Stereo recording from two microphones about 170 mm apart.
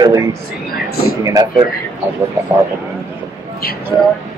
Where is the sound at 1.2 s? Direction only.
20° right (ahead or behind).